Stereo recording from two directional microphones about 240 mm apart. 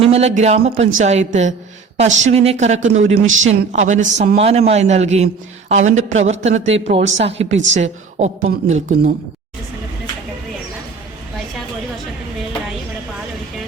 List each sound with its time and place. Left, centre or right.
0.0 s a woman's voice: right